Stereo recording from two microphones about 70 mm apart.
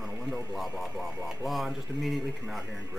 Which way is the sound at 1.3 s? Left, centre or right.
Centre.